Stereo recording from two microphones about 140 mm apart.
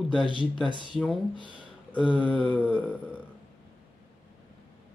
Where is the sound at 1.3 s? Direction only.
35° left (ahead or behind).